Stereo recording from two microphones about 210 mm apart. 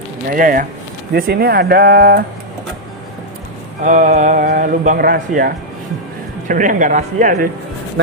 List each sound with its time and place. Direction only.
0.3 s mantra: 40° right (ahead or behind)
1.1 s speech: 50° right (ahead or behind)
3.8 s mantra: 35° right (ahead or behind)